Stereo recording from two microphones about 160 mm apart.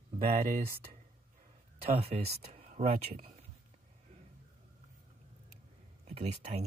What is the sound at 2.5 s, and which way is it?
Speech, 45° right (ahead or behind).